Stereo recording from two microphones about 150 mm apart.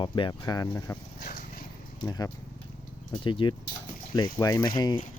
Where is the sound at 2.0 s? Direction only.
25° left (ahead or behind).